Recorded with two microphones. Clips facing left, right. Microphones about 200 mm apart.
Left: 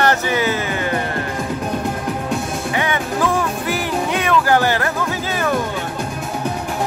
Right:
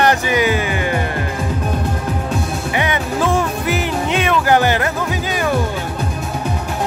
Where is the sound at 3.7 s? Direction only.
20° right (ahead or behind).